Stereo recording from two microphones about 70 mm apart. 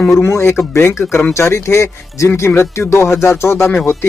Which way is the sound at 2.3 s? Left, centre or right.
Left.